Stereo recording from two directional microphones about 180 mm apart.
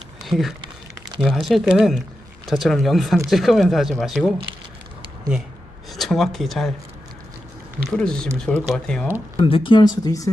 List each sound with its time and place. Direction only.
0.3 s speech: centre (ahead or behind)
5.9 s speech: centre (ahead or behind)
7.9 s speech: 5° left (ahead or behind)
9.4 s speech: 30° left (ahead or behind)